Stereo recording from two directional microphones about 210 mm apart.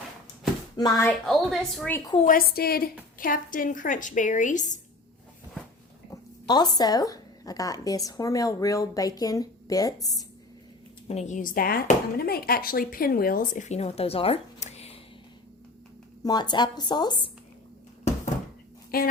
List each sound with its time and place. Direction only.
0.8 s speech: 15° left (ahead or behind)
1.3 s a woman's voice: centre (ahead or behind)
2.1 s speech: 40° left (ahead or behind)
6.1 s speech: 20° left (ahead or behind)
11.1 s speech: 35° left (ahead or behind)
16.2 s speech: 20° left (ahead or behind)
18.9 s a woman's voice: 45° left (ahead or behind)